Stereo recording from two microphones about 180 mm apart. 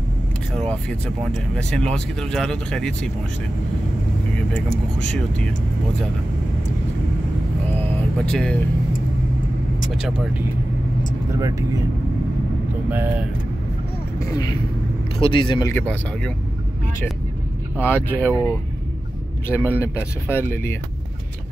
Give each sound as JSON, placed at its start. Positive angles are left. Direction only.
{"t": 0.6, "sound": "speech", "side_deg": 5}
{"t": 7.9, "sound": "vehicle", "side_deg": 5}
{"t": 9.8, "sound": "speech", "side_deg": 0}
{"t": 11.3, "sound": "speech", "side_deg": -15}
{"t": 12.9, "sound": "speech", "side_deg": -10}
{"t": 14.2, "sound": "speech", "side_deg": 20}
{"t": 15.7, "sound": "speech", "side_deg": 10}
{"t": 17.8, "sound": "speech", "side_deg": 10}